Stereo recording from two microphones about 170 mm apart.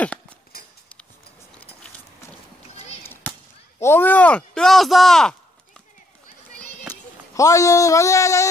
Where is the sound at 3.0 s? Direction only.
10° left (ahead or behind).